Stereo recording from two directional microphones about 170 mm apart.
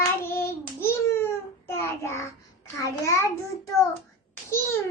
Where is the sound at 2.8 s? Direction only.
15° left (ahead or behind).